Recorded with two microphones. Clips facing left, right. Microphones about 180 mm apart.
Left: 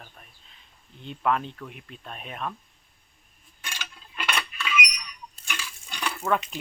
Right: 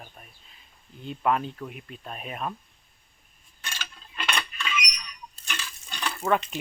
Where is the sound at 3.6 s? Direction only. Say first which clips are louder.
Even; 15° left (ahead or behind).